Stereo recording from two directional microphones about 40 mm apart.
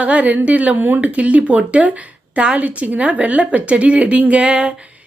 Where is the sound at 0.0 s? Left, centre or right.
Right.